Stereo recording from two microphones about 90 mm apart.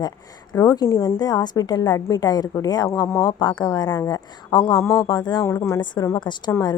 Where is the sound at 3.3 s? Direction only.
50° left (ahead or behind).